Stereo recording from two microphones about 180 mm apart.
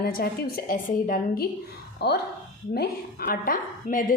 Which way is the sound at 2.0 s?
65° left (ahead or behind).